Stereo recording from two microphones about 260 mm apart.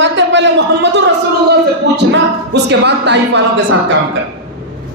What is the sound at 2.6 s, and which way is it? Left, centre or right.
Speech, right.